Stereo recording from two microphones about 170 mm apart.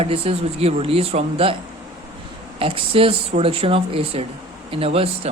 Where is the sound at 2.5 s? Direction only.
35° right (ahead or behind).